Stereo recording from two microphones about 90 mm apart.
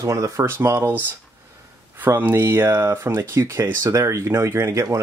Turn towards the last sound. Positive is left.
turn(degrees=-35)  # may be behind; listen again after turning